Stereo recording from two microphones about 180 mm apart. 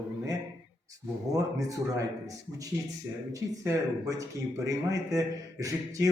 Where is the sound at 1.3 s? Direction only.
20° right (ahead or behind).